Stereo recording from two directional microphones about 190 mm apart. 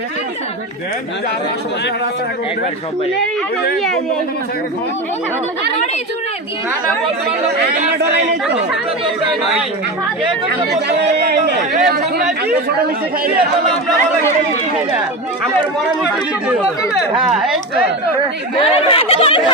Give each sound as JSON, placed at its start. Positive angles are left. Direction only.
{"t": 10.8, "sound": "speech", "side_deg": -60}
{"t": 16.5, "sound": "speech", "side_deg": -5}
{"t": 18.5, "sound": "speech", "side_deg": 30}